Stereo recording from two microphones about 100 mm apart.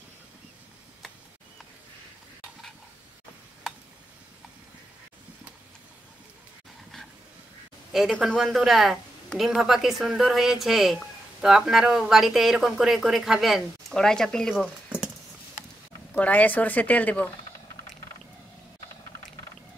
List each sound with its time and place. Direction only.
7.9 s speech: centre (ahead or behind)
14.5 s a sound: 5° right (ahead or behind)
16.1 s speech: 15° left (ahead or behind)